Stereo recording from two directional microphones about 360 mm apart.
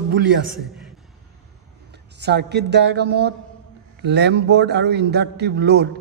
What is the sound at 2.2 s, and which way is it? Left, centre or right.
A man's voice, right.